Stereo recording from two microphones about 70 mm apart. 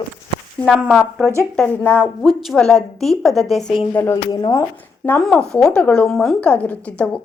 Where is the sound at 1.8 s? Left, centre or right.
Left.